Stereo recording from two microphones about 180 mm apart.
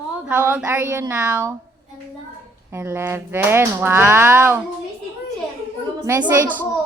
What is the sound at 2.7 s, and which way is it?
Speech, 15° right (ahead or behind).